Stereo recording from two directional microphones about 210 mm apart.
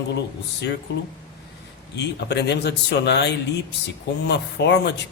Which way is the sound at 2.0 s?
55° left (ahead or behind).